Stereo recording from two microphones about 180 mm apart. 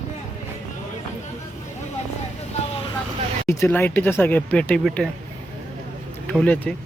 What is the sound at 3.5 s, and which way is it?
Speech, 15° left (ahead or behind).